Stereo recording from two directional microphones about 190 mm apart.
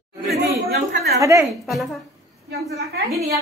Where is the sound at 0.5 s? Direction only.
55° right (ahead or behind).